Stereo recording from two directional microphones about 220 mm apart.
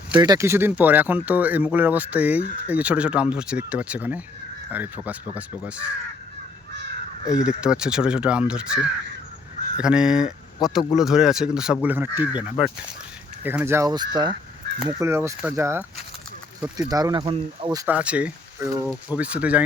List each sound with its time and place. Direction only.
0.1 s speech: 20° right (ahead or behind)
7.4 s speech: 5° right (ahead or behind)
16.9 s speech: 20° right (ahead or behind)
17.8 s speech: 5° right (ahead or behind)